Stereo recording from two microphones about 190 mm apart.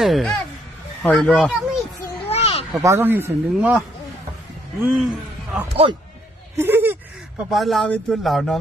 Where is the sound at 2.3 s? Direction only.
30° left (ahead or behind).